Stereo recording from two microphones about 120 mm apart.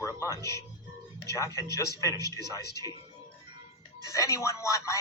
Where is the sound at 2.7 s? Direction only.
30° right (ahead or behind).